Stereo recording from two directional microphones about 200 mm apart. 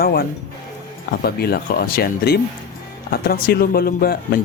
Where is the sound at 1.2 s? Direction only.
50° left (ahead or behind).